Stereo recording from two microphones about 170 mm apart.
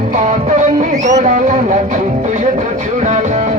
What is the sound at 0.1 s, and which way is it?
Music, 45° right (ahead or behind).